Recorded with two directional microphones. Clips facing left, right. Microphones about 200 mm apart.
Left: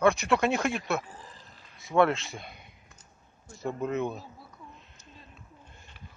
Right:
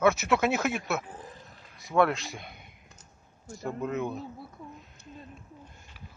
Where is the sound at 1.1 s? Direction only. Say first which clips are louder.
Right 4 dB; 60° right (ahead or behind).